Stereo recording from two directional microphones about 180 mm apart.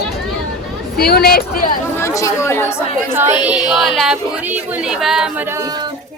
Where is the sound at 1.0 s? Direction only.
60° left (ahead or behind).